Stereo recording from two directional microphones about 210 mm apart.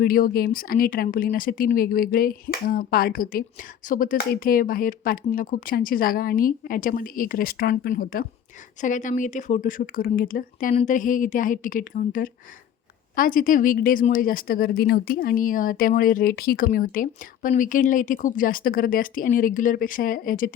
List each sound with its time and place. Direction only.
0.0 s speech: 45° left (ahead or behind)